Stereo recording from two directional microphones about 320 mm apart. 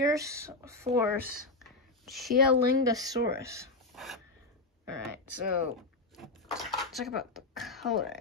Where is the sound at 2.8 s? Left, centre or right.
Centre.